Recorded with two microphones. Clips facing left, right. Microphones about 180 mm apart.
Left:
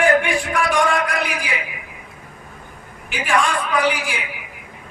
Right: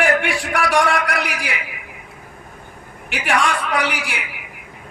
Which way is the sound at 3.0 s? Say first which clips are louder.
Even; 75° right (ahead or behind).